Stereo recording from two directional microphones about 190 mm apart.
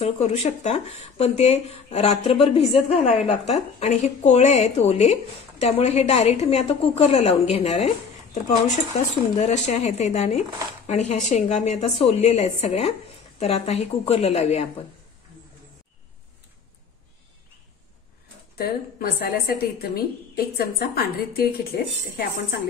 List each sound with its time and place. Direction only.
0.0 s speech: 35° left (ahead or behind)
18.6 s a woman's voice: 50° left (ahead or behind)